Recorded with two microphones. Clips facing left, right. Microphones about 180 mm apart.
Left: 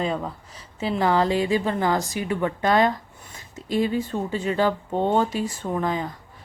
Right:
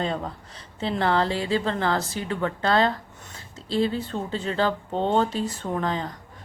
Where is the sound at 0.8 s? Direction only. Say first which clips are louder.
Left 2 dB; 10° left (ahead or behind).